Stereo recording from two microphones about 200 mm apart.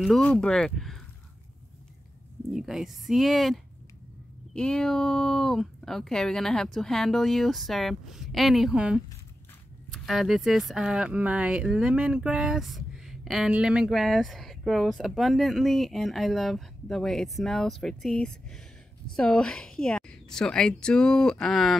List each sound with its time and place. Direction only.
0.0 s speech: 5° left (ahead or behind)
2.5 s speech: centre (ahead or behind)